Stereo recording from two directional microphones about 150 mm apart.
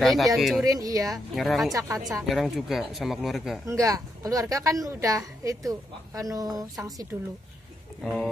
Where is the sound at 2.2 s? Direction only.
Centre (ahead or behind).